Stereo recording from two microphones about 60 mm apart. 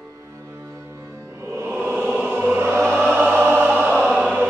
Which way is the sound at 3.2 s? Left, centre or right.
Right.